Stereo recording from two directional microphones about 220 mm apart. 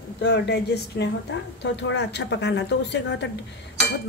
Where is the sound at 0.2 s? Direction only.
50° left (ahead or behind).